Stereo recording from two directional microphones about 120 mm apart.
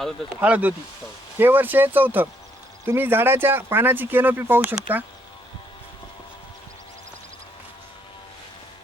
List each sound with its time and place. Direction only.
0.3 s speech: 15° right (ahead or behind)